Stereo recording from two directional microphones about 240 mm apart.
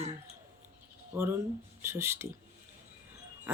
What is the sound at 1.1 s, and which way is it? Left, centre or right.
Speech, centre.